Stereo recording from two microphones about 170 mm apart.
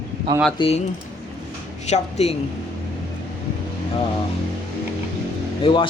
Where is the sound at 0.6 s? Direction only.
35° left (ahead or behind).